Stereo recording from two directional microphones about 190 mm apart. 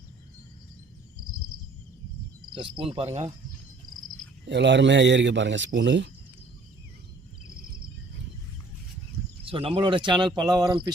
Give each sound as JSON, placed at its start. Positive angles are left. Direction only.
{"t": 2.6, "sound": "speech", "side_deg": -25}
{"t": 4.4, "sound": "a man's voice", "side_deg": -65}
{"t": 9.4, "sound": "speech", "side_deg": -30}